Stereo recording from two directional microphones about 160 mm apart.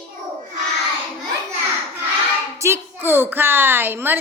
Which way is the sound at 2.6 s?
15° right (ahead or behind).